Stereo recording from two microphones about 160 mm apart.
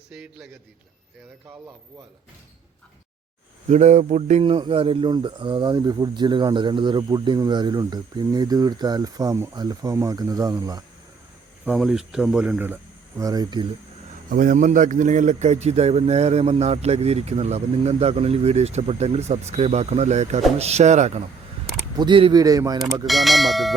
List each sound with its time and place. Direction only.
0.1 s speech: 5° right (ahead or behind)
3.7 s speech: 45° right (ahead or behind); by 10.8 s 25° right (ahead or behind)
11.6 s speech: 5° right (ahead or behind); by 13.7 s 25° right (ahead or behind)
14.3 s a man's voice: 55° right (ahead or behind)
21.9 s speech: 30° right (ahead or behind)
23.0 s speech: centre (ahead or behind)